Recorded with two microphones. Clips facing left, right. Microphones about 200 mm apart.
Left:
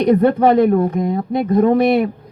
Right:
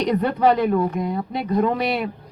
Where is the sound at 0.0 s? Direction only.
50° left (ahead or behind).